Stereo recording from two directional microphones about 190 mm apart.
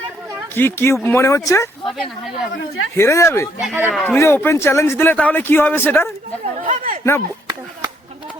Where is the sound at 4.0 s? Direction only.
10° left (ahead or behind).